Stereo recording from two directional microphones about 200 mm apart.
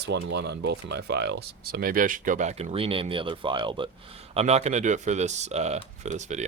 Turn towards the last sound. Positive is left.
turn(degrees=-35)  # may be behind; listen again after turning